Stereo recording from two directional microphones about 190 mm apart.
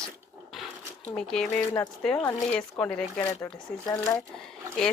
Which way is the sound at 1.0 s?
5° left (ahead or behind).